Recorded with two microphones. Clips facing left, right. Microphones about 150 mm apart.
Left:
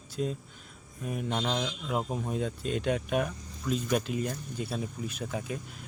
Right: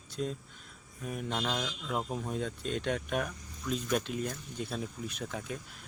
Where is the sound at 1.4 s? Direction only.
20° left (ahead or behind).